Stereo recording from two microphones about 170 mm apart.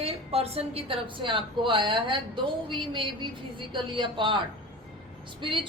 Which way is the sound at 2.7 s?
30° right (ahead or behind).